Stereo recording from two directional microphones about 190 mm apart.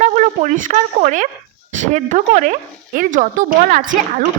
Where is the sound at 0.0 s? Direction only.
40° right (ahead or behind).